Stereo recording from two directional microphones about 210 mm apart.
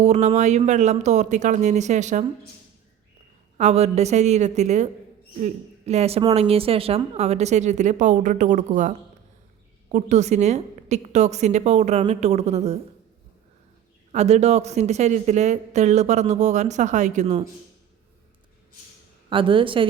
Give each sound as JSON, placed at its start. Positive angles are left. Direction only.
{"t": 0.0, "sound": "a woman's voice", "side_deg": -35}
{"t": 3.6, "sound": "a woman's voice", "side_deg": -30}
{"t": 9.9, "sound": "a woman's voice", "side_deg": -35}
{"t": 14.1, "sound": "a woman's voice", "side_deg": -30}
{"t": 19.3, "sound": "a woman's voice", "side_deg": -25}